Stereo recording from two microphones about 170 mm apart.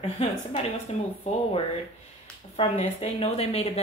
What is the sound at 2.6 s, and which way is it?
Speech, 35° left (ahead or behind).